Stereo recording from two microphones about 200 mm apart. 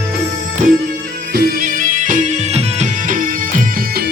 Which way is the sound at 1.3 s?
45° right (ahead or behind).